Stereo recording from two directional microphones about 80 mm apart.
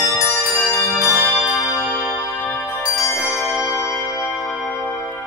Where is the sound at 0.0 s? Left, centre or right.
Left.